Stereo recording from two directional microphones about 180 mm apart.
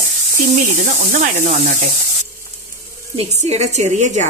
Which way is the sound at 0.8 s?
45° right (ahead or behind).